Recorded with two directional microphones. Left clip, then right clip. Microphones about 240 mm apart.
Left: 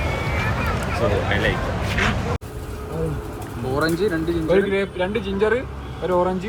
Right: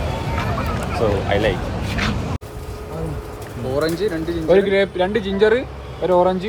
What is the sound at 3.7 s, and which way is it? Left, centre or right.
Speech, centre.